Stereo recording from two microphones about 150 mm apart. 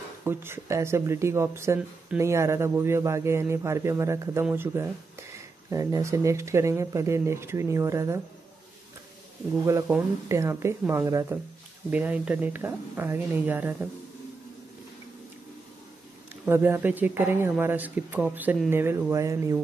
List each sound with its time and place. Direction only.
0.2 s speech: 15° right (ahead or behind)
9.7 s speech: 20° right (ahead or behind)
16.4 s speech: 15° right (ahead or behind)